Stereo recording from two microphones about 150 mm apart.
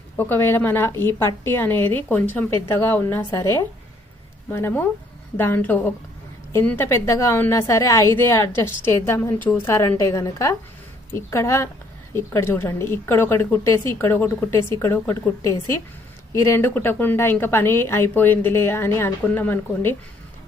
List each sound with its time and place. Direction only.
0.2 s a woman's voice: 15° left (ahead or behind)